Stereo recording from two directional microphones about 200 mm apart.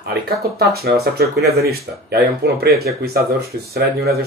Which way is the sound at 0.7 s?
50° right (ahead or behind).